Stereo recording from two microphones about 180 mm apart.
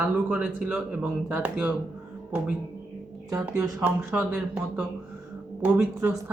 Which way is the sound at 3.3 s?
20° right (ahead or behind).